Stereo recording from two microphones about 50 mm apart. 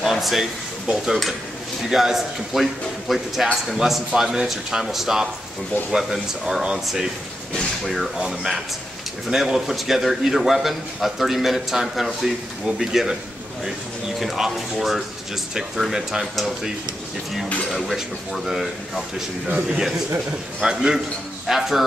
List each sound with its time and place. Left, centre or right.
0.0 s a man's voice: centre
7.8 s a man's voice: centre
14.2 s a man's voice: centre
19.4 s a man's voice: right
20.6 s speech: centre